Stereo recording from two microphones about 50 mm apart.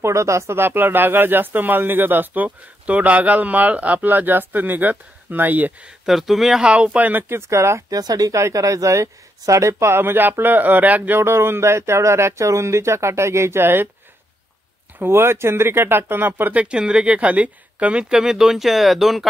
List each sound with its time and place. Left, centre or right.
0.0 s speech: right
0.6 s speech: right
6.0 s speech: centre
6.6 s speech: right
7.2 s speech: right
8.3 s speech: right
11.1 s speech: right
15.0 s speech: right
16.5 s speech: right; by 19.2 s centre